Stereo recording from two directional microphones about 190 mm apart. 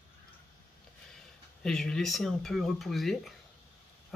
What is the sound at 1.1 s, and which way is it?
Speech, 5° left (ahead or behind).